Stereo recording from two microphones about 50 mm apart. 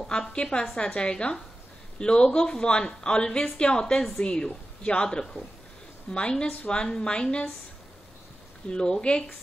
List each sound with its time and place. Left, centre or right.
0.2 s a woman's voice: centre
8.6 s speech: centre